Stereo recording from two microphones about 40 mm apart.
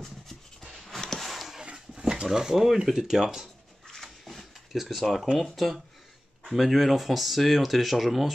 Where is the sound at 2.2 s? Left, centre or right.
Centre.